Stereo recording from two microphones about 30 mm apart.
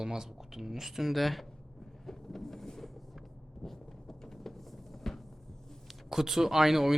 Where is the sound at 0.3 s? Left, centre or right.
Centre.